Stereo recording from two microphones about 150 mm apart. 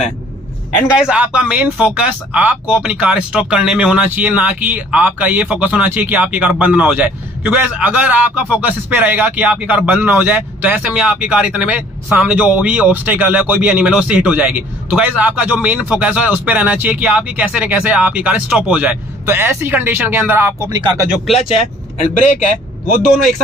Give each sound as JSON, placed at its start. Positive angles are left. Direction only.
{"t": 0.9, "sound": "speech", "side_deg": -5}
{"t": 22.1, "sound": "a man's voice", "side_deg": 55}